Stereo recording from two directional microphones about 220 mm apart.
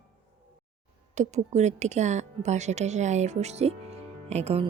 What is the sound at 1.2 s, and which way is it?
Speech, 30° right (ahead or behind).